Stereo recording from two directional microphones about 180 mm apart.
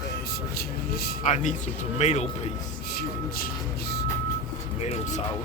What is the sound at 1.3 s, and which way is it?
Speech, 45° left (ahead or behind).